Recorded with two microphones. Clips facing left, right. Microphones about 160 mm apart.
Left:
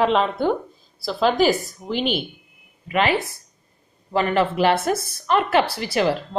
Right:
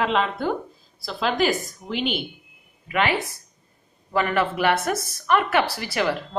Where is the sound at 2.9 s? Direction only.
25° left (ahead or behind).